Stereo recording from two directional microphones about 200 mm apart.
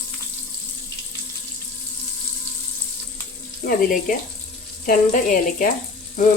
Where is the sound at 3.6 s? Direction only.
45° left (ahead or behind).